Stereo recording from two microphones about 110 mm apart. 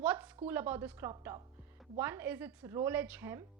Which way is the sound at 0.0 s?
15° right (ahead or behind).